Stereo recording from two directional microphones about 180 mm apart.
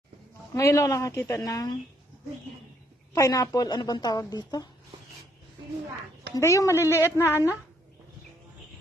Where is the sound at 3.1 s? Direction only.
20° left (ahead or behind).